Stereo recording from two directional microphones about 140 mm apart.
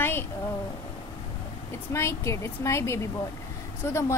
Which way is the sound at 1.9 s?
20° left (ahead or behind).